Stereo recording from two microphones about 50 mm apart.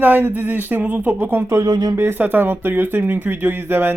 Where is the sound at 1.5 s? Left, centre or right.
Right.